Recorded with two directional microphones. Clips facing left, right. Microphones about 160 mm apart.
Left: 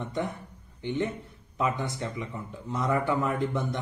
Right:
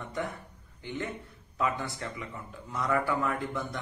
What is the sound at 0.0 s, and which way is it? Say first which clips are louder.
Speech: left 3 dB; 20° left (ahead or behind).